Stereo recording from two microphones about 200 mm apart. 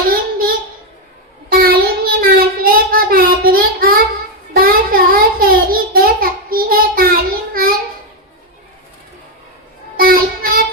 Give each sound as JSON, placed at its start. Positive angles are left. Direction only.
{"t": 0.1, "sound": "a sound", "side_deg": -45}
{"t": 1.5, "sound": "child singing", "side_deg": -50}
{"t": 10.0, "sound": "music", "side_deg": -45}